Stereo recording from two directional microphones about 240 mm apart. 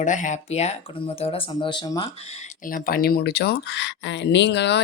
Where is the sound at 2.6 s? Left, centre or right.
Left.